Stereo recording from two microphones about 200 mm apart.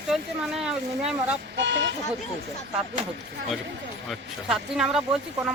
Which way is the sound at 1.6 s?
65° right (ahead or behind).